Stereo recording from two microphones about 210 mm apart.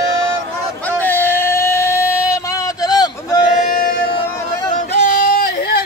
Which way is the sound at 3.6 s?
45° left (ahead or behind).